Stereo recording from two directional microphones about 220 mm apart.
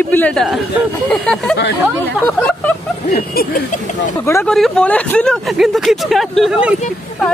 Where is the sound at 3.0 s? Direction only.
40° left (ahead or behind).